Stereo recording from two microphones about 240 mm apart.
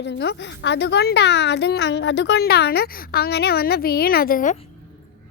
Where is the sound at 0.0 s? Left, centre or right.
Left.